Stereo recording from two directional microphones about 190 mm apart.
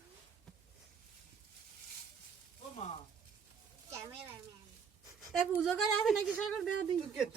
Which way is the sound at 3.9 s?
15° right (ahead or behind).